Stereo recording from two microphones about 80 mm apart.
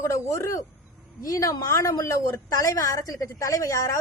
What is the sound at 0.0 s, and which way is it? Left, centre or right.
A woman's voice, left.